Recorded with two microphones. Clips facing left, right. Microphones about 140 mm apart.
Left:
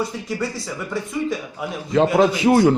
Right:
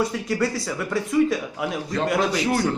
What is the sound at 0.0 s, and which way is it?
Speech, centre (ahead or behind).